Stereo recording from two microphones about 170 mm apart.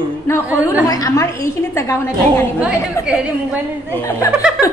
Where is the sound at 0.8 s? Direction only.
20° left (ahead or behind).